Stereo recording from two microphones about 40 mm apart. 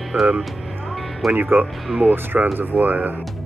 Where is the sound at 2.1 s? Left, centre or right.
Right.